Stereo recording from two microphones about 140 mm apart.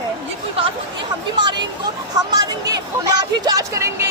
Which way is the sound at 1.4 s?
35° right (ahead or behind).